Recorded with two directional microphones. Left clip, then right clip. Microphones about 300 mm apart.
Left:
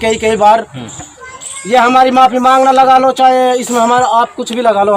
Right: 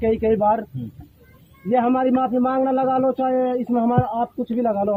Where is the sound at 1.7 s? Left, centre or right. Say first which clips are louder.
Left 12 dB; centre.